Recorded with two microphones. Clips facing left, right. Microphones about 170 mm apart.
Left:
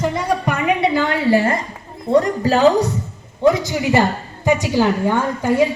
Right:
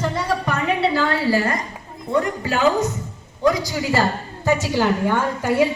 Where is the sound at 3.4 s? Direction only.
25° left (ahead or behind).